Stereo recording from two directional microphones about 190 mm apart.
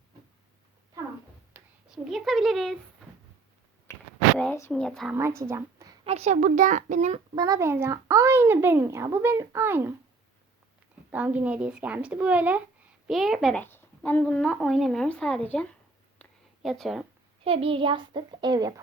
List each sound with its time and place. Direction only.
1.5 s speech: centre (ahead or behind)
4.4 s a child's voice: 10° left (ahead or behind)
5.1 s a woman's voice: 15° right (ahead or behind)
6.1 s a child's voice: 35° right (ahead or behind)
7.3 s speech: 20° right (ahead or behind)
11.1 s a child's voice: 10° right (ahead or behind)
16.6 s a child's voice: centre (ahead or behind)
17.4 s a child's voice: 30° right (ahead or behind)